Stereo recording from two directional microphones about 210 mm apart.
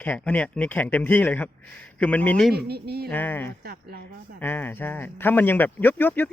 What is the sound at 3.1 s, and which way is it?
Speech, 10° left (ahead or behind).